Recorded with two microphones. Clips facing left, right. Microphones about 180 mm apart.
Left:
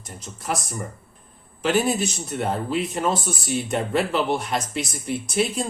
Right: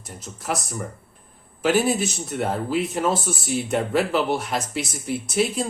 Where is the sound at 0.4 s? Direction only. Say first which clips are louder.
Even; centre (ahead or behind).